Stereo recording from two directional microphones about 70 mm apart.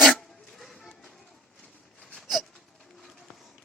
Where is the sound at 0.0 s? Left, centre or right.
Centre.